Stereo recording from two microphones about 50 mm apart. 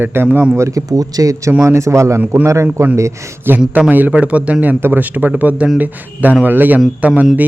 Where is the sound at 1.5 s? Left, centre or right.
Right.